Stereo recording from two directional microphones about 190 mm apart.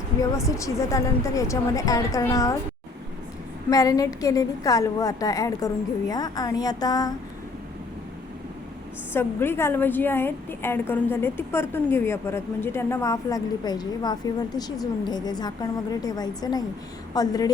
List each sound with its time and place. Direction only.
0.2 s a woman's voice: 15° left (ahead or behind)
3.7 s a woman's voice: 20° left (ahead or behind)
9.1 s a woman's voice: 10° left (ahead or behind)